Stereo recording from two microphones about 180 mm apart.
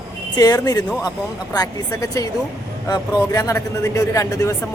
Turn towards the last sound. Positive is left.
turn(degrees=15)  # may be behind; listen again after turning